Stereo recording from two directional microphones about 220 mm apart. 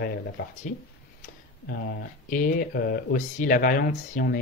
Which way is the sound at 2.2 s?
40° left (ahead or behind).